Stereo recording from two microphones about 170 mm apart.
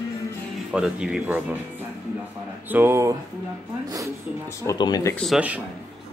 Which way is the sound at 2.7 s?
15° right (ahead or behind).